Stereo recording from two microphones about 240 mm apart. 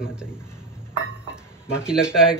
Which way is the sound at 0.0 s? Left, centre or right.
Centre.